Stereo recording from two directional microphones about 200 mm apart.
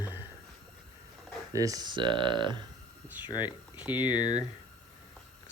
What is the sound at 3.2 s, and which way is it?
Speech, 20° left (ahead or behind).